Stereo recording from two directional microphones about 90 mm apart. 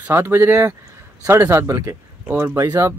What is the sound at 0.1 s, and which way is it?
Speech, 25° right (ahead or behind).